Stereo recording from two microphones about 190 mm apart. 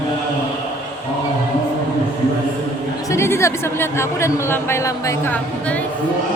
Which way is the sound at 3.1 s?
15° left (ahead or behind).